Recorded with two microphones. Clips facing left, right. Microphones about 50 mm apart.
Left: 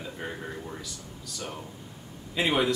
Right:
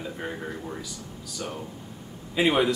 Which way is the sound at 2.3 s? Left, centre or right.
Centre.